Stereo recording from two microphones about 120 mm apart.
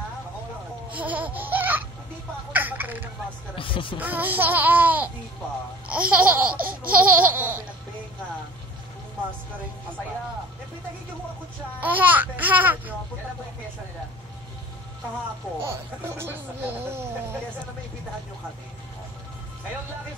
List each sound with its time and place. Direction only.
0.9 s laughter: 15° right (ahead or behind)
3.5 s music: 45° left (ahead or behind)
4.0 s laughter: 15° right (ahead or behind)
11.8 s laughter: 15° right (ahead or behind)
15.6 s speech: 20° right (ahead or behind)